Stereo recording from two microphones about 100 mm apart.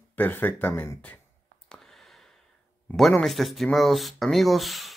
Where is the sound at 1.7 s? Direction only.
5° left (ahead or behind).